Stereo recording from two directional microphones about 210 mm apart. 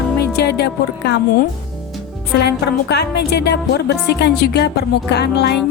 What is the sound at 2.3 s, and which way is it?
Music, 50° left (ahead or behind).